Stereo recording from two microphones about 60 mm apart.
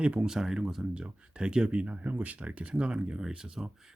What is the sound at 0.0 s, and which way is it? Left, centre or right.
Speech, centre.